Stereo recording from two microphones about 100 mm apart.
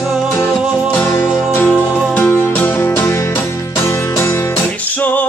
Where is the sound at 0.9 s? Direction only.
20° left (ahead or behind).